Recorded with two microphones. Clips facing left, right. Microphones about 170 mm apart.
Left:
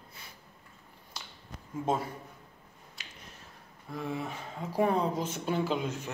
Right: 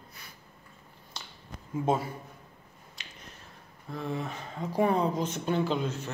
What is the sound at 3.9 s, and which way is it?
Speech, 10° left (ahead or behind).